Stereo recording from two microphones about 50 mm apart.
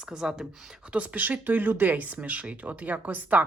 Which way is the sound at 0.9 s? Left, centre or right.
Right.